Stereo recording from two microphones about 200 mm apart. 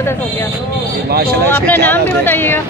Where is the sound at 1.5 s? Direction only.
10° left (ahead or behind).